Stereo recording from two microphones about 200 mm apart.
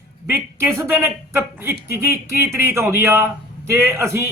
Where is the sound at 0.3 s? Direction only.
10° right (ahead or behind).